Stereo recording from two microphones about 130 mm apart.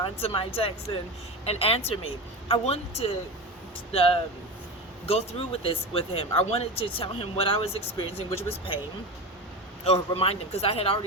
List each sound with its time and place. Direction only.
0.0 s speech: 45° left (ahead or behind)
9.8 s speech: 50° left (ahead or behind)